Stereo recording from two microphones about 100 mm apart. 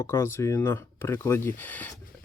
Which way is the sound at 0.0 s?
25° left (ahead or behind).